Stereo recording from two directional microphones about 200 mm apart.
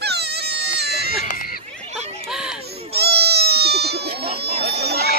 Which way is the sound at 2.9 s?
55° right (ahead or behind).